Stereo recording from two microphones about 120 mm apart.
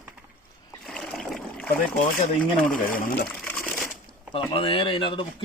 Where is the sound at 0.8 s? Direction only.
5° left (ahead or behind).